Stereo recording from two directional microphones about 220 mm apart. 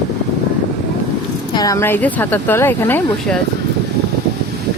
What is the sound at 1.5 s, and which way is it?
Speech, 15° left (ahead or behind).